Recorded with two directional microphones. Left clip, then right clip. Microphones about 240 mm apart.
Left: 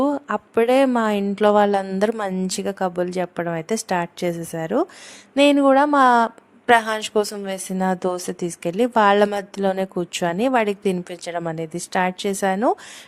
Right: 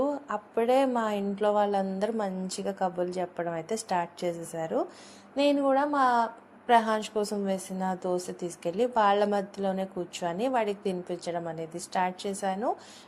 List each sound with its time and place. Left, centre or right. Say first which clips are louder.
0.3 s a woman's voice: left 8 dB; left
9.6 s speech: left 9 dB; left
10.2 s a woman's voice: left 9 dB; left